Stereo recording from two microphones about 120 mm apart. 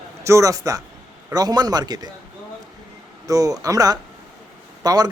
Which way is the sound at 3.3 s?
30° right (ahead or behind).